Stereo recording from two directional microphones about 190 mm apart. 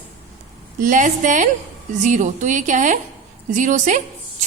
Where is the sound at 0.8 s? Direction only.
45° right (ahead or behind).